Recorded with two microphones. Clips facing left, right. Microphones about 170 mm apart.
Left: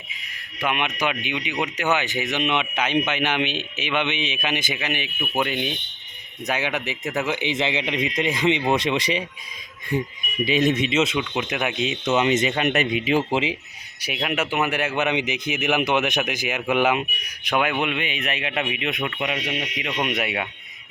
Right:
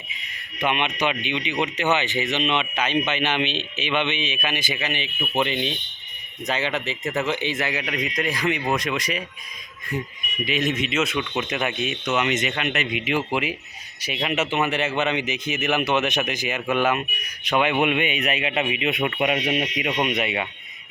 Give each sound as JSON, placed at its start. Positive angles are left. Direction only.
{"t": 0.6, "sound": "speech", "side_deg": 5}
{"t": 10.4, "sound": "speech", "side_deg": 30}
{"t": 11.2, "sound": "speech", "side_deg": 10}
{"t": 11.9, "sound": "speech", "side_deg": 25}
{"t": 12.6, "sound": "speech", "side_deg": 40}
{"t": 14.0, "sound": "speech", "side_deg": 5}
{"t": 15.1, "sound": "speech", "side_deg": 15}
{"t": 17.7, "sound": "speech", "side_deg": -15}
{"t": 19.5, "sound": "speech", "side_deg": -25}
{"t": 20.1, "sound": "speech", "side_deg": 5}